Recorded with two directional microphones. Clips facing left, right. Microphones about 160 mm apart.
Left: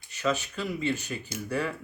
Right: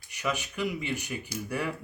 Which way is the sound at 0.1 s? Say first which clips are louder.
Left 4 dB; 15° right (ahead or behind).